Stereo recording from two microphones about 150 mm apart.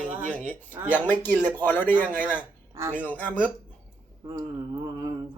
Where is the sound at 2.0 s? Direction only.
10° right (ahead or behind).